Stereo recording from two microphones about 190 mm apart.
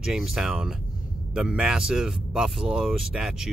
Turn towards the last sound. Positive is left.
turn(degrees=-5)  # may be behind; listen again after turning